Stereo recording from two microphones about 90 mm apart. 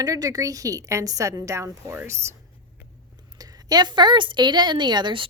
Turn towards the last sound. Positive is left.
turn(degrees=-60)  # may be behind; listen again after turning